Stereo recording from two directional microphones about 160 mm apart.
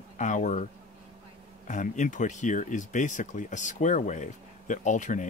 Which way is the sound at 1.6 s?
50° left (ahead or behind).